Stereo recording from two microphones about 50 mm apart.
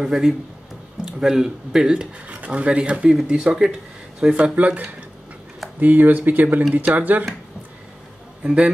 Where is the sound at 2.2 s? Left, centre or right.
Right.